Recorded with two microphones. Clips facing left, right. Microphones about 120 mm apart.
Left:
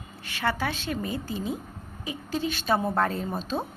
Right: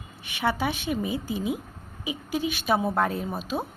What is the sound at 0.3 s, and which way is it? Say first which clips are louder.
Speech: right 2 dB; 15° right (ahead or behind).